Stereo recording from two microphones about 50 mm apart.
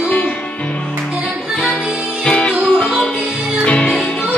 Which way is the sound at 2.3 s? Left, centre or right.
Centre.